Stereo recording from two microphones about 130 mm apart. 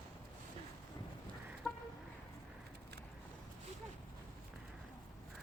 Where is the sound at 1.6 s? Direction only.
5° right (ahead or behind).